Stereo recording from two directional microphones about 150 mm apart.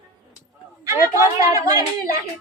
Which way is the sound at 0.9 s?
20° right (ahead or behind).